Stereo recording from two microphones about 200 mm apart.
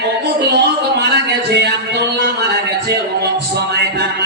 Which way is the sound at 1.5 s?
55° right (ahead or behind).